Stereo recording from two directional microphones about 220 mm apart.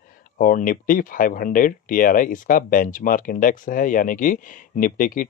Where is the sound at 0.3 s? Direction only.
40° left (ahead or behind).